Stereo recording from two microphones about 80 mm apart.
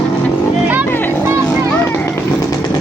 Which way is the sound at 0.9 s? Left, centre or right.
Left.